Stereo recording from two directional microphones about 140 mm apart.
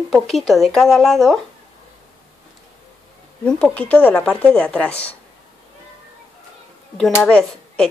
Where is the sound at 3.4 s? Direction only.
10° left (ahead or behind).